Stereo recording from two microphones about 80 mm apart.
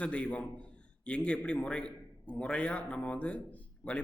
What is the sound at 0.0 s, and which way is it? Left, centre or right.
Speech, centre.